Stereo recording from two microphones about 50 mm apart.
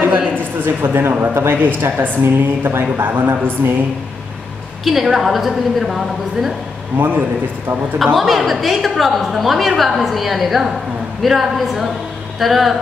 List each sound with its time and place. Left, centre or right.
0.4 s a woman's voice: right
4.8 s a woman's voice: centre
7.0 s a man's voice: right
8.0 s a woman's voice: centre